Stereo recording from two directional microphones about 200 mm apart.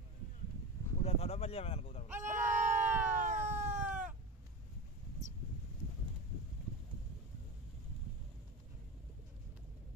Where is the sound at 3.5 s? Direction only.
35° right (ahead or behind).